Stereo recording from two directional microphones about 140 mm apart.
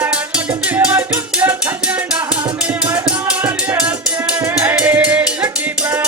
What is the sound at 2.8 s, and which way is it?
Music, 10° right (ahead or behind).